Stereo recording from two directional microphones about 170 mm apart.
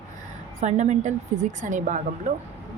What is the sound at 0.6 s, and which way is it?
Speech, 40° right (ahead or behind).